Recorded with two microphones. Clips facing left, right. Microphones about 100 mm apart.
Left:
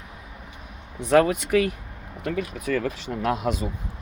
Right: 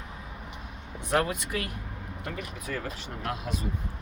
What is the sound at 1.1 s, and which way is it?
Speech, 85° left.